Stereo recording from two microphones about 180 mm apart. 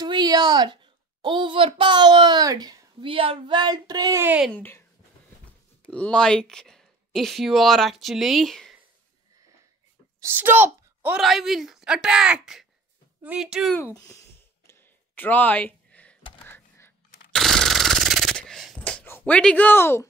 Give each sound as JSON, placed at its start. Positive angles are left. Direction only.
{"t": 0.0, "sound": "a sound", "side_deg": -20}
{"t": 1.2, "sound": "a child's voice", "side_deg": -25}
{"t": 4.5, "sound": "speech", "side_deg": 10}
{"t": 5.9, "sound": "speech", "side_deg": 5}
{"t": 10.3, "sound": "speech", "side_deg": -10}
{"t": 13.7, "sound": "speech", "side_deg": 15}
{"t": 14.7, "sound": "a sound", "side_deg": 10}
{"t": 16.4, "sound": "whispering", "side_deg": 15}
{"t": 17.3, "sound": "a sound", "side_deg": 0}
{"t": 18.8, "sound": "speech", "side_deg": 10}